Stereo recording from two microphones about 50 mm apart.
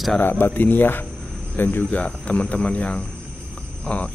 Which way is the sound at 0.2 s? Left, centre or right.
Left.